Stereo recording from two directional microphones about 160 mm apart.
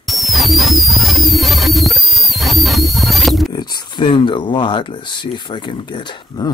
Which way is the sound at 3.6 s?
25° left (ahead or behind).